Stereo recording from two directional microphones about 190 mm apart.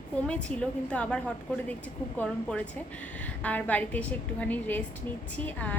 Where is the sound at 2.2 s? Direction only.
5° left (ahead or behind).